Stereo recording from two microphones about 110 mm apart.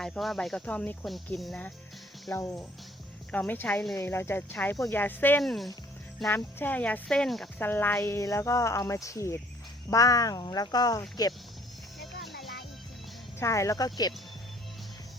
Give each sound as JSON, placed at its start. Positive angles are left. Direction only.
{"t": 0.0, "sound": "speech", "side_deg": 0}
{"t": 1.0, "sound": "speech", "side_deg": 0}
{"t": 2.3, "sound": "speech", "side_deg": 25}
{"t": 5.4, "sound": "speech", "side_deg": 0}
{"t": 6.2, "sound": "speech", "side_deg": 20}
{"t": 7.6, "sound": "speech", "side_deg": 20}
{"t": 11.9, "sound": "music", "side_deg": 0}
{"t": 13.4, "sound": "speech", "side_deg": 30}